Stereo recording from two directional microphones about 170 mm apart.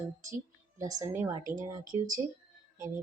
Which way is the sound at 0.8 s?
20° right (ahead or behind).